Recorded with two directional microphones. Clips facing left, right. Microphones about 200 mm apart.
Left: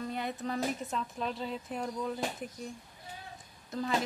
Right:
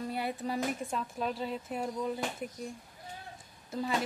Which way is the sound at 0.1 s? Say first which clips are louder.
Right 1 dB; 10° right (ahead or behind).